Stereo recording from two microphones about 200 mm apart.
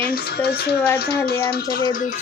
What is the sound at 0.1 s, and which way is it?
Speech, 55° left (ahead or behind).